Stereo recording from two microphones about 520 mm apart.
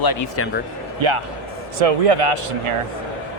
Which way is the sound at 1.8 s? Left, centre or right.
Right.